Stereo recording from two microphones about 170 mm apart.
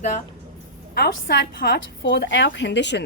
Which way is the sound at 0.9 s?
70° left (ahead or behind).